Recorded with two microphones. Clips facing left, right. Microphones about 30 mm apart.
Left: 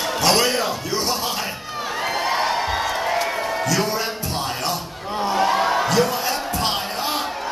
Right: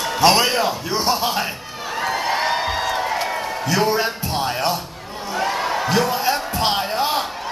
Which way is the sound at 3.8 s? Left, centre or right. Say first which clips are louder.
Right 4 dB; centre.